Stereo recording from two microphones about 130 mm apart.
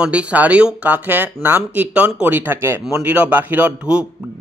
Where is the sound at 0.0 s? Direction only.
10° right (ahead or behind).